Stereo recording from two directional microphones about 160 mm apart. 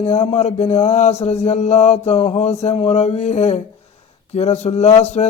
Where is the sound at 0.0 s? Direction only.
40° left (ahead or behind).